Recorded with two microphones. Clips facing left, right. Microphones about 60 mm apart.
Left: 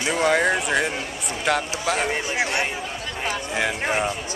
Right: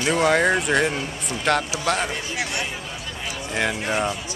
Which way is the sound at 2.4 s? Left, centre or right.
Left.